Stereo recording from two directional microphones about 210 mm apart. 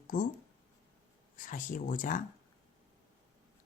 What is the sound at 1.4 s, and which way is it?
Speech, 40° left (ahead or behind).